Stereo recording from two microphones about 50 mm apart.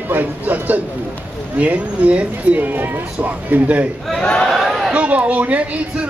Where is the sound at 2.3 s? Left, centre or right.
Right.